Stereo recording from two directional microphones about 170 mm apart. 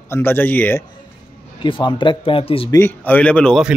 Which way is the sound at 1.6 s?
30° left (ahead or behind).